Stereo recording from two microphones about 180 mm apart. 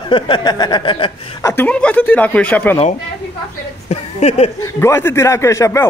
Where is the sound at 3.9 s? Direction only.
35° left (ahead or behind).